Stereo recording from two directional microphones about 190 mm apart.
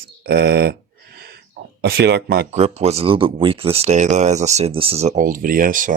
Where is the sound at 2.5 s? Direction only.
35° right (ahead or behind).